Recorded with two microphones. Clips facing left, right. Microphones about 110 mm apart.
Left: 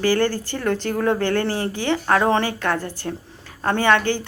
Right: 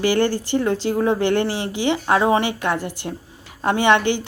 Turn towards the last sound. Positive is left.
turn(degrees=-20)  # may be behind; listen again after turning